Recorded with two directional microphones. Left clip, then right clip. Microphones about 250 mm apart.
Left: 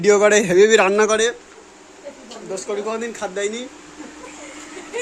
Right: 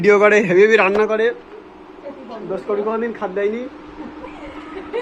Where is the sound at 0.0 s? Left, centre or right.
Left.